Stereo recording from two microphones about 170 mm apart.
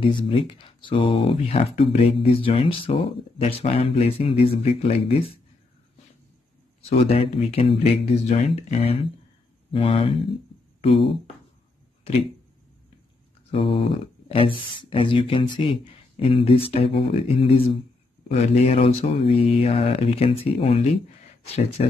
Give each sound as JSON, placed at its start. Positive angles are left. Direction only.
{"t": 0.0, "sound": "speech", "side_deg": 30}
{"t": 6.8, "sound": "speech", "side_deg": 35}
{"t": 13.5, "sound": "speech", "side_deg": 30}